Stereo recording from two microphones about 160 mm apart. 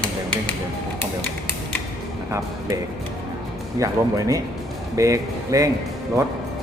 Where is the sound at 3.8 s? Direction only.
20° right (ahead or behind).